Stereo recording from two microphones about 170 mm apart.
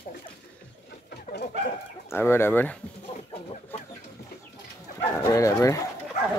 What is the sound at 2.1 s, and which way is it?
Speech, 15° left (ahead or behind).